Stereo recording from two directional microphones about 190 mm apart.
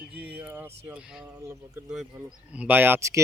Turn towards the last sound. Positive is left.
turn(degrees=-15)  # may be behind; listen again after turning